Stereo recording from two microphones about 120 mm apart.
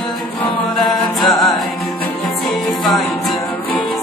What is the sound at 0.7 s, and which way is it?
Music, centre (ahead or behind).